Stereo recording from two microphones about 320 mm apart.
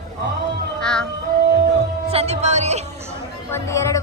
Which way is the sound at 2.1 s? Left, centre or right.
Centre.